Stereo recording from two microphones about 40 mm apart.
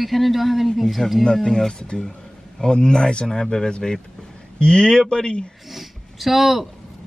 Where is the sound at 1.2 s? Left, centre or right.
Centre.